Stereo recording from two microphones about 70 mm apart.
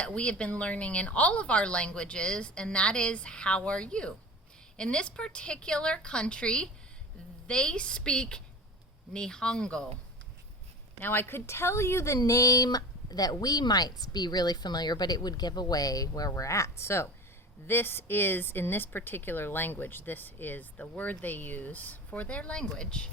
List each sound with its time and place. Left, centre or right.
0.0 s speech: centre
11.0 s speech: left
16.3 s speech: left; by 23.0 s centre